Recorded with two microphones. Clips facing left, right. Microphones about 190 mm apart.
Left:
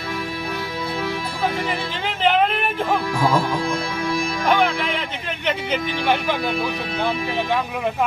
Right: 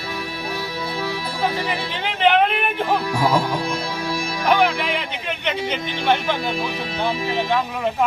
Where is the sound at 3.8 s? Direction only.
50° left (ahead or behind).